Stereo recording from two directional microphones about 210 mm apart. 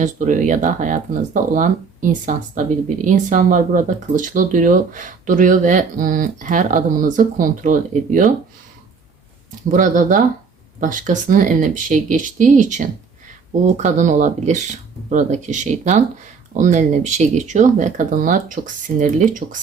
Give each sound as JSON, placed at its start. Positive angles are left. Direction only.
{"t": 0.0, "sound": "speech", "side_deg": -35}
{"t": 9.6, "sound": "speech", "side_deg": -40}